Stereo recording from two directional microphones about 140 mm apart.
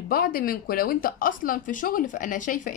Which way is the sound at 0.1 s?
90° left.